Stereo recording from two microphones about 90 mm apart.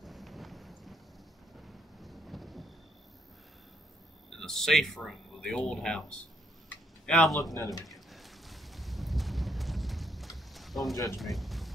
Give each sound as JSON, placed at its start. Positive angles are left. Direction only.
{"t": 0.0, "sound": "a sound", "side_deg": 0}
{"t": 1.6, "sound": "thunder", "side_deg": 0}
{"t": 4.4, "sound": "a man's voice", "side_deg": 5}
{"t": 7.5, "sound": "speech", "side_deg": 40}
{"t": 7.8, "sound": "boat", "side_deg": 0}
{"t": 11.1, "sound": "speech", "side_deg": 0}